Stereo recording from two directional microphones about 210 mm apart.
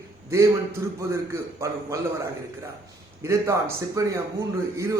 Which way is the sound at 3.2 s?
15° right (ahead or behind).